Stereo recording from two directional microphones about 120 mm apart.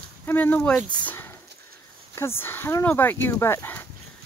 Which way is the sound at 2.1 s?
20° left (ahead or behind).